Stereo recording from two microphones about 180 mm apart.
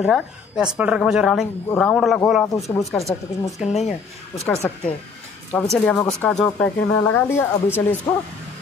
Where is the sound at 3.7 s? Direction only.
40° left (ahead or behind).